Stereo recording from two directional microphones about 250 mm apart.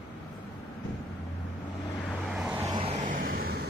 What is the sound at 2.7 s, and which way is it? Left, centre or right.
Vehicle, right.